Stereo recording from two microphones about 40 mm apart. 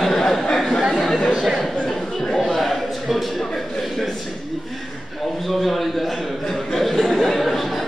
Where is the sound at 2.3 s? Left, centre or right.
Centre.